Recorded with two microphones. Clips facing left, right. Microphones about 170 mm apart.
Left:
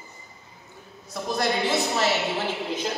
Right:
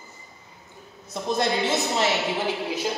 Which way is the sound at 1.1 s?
20° right (ahead or behind).